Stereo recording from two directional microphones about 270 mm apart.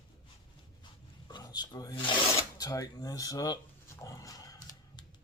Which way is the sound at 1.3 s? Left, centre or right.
Centre.